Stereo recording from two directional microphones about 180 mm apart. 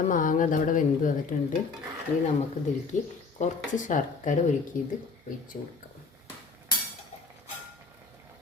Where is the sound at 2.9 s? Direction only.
40° left (ahead or behind).